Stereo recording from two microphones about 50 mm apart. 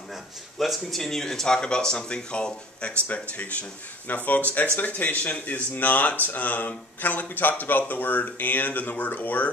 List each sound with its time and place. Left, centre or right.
0.1 s speech: centre; by 9.5 s left